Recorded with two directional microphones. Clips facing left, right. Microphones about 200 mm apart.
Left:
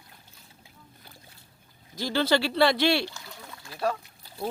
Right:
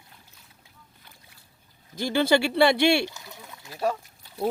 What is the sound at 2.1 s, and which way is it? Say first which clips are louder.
Speech: right 3 dB; 15° right (ahead or behind).